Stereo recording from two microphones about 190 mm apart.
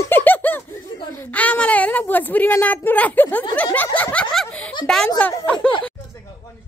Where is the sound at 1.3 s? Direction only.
10° left (ahead or behind).